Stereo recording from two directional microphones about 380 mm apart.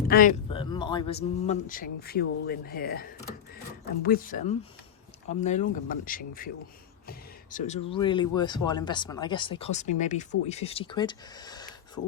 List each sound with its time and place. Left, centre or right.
0.1 s speech: left